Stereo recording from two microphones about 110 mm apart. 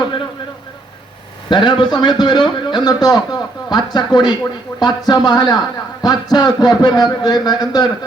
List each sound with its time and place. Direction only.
1.5 s a man's voice: 45° left (ahead or behind)